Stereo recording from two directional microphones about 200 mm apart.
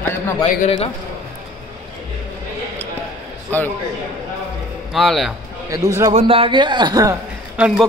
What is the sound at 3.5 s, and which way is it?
Speech, 10° left (ahead or behind).